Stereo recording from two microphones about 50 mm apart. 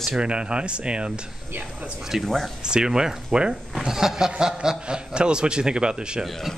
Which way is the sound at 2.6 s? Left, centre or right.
Centre.